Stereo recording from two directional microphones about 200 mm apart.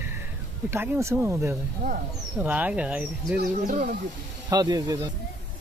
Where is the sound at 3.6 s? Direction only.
40° right (ahead or behind).